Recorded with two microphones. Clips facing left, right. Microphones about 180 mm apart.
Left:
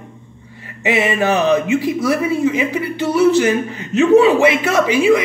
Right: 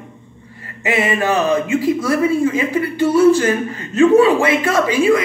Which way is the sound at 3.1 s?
20° left (ahead or behind).